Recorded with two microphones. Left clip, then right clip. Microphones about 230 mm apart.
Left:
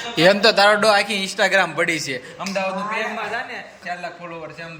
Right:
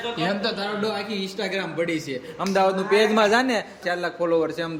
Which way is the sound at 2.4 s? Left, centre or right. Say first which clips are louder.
Right 6 dB; centre.